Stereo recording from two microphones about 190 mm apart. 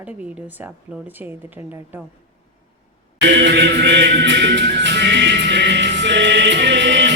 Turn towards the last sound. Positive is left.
turn(degrees=-70)  # may be behind; listen again after turning